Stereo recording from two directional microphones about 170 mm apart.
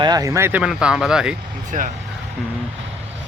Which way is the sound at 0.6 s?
5° right (ahead or behind).